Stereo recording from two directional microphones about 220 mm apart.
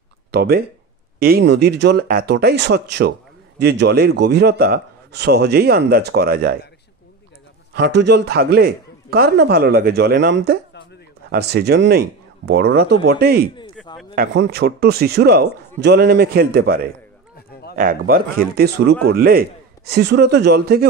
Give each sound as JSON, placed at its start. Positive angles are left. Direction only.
{"t": 0.3, "sound": "a man's voice", "side_deg": -45}
{"t": 7.7, "sound": "a man's voice", "side_deg": -50}
{"t": 13.8, "sound": "a sound", "side_deg": 0}
{"t": 14.1, "sound": "a man's voice", "side_deg": -50}